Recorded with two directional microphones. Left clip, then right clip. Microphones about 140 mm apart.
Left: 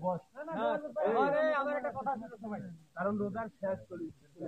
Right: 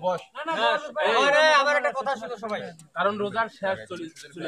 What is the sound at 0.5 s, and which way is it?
A man's voice, 25° right (ahead or behind).